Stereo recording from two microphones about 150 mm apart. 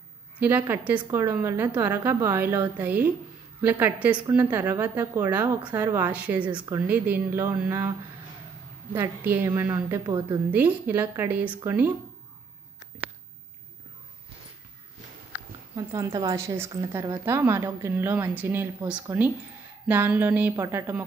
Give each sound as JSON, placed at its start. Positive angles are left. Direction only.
{"t": 0.4, "sound": "a woman's voice", "side_deg": -15}
{"t": 4.0, "sound": "a woman's voice", "side_deg": -10}
{"t": 8.9, "sound": "a woman's voice", "side_deg": -15}
{"t": 10.5, "sound": "a woman's voice", "side_deg": -10}
{"t": 15.7, "sound": "a woman's voice", "side_deg": -25}